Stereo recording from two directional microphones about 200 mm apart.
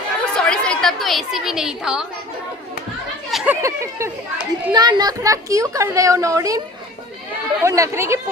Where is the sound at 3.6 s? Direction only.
15° right (ahead or behind).